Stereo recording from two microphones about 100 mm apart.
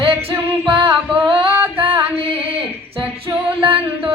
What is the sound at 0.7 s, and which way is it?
Singing, 50° right (ahead or behind).